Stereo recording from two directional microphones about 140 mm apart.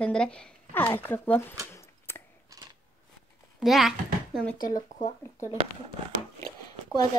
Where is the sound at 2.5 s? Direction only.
25° right (ahead or behind).